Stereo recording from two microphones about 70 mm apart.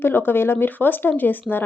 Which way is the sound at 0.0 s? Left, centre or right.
Left.